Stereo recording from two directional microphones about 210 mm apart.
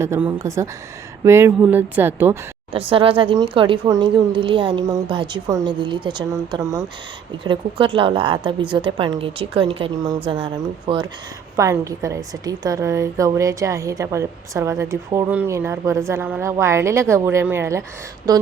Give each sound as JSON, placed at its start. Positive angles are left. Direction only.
{"t": 0.0, "sound": "a woman's voice", "side_deg": -10}
{"t": 2.7, "sound": "a woman's voice", "side_deg": -25}